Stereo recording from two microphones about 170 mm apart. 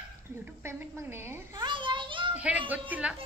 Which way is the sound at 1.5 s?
30° right (ahead or behind).